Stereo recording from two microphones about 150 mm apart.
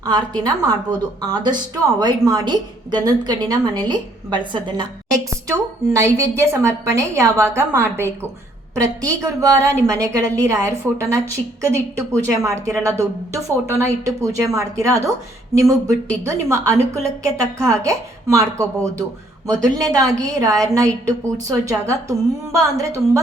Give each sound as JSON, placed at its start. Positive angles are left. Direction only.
{"t": 0.0, "sound": "a woman's voice", "side_deg": -25}